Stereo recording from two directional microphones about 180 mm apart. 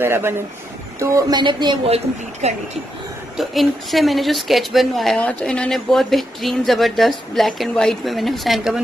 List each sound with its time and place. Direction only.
0.0 s speech: 15° right (ahead or behind)
2.4 s speech: 35° right (ahead or behind)
3.3 s a woman's voice: centre (ahead or behind)